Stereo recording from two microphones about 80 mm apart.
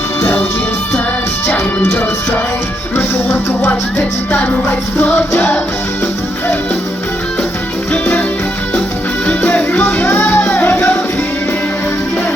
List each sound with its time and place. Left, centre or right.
0.2 s music: left
1.5 s music: centre
9.2 s music: centre